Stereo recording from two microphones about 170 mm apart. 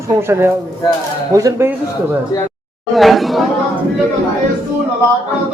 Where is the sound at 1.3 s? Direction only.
15° right (ahead or behind).